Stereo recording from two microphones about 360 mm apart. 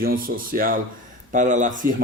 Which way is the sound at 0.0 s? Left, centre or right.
Right.